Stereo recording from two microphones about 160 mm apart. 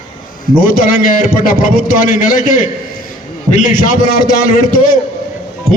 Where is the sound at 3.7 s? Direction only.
60° left (ahead or behind).